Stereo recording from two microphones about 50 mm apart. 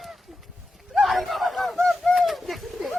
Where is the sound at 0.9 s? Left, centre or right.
Centre.